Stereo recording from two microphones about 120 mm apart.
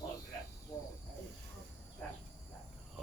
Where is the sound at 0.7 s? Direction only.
25° left (ahead or behind).